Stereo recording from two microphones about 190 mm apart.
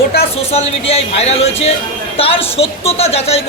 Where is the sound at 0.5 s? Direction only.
30° left (ahead or behind).